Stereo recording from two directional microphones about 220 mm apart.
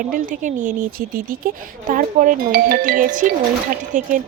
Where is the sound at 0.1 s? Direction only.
40° right (ahead or behind).